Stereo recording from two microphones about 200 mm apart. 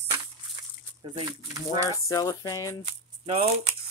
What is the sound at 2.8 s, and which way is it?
Speech, 30° right (ahead or behind).